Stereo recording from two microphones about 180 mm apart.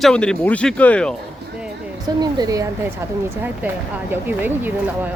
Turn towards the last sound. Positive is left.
turn(degrees=-10)  # may be behind; listen again after turning